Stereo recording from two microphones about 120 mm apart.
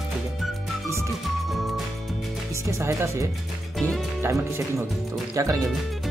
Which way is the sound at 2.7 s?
25° right (ahead or behind).